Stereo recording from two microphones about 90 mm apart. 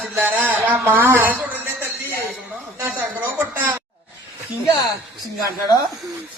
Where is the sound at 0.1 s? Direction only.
25° right (ahead or behind).